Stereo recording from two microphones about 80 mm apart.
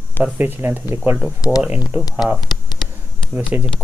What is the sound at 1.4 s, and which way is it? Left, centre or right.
Speech, left.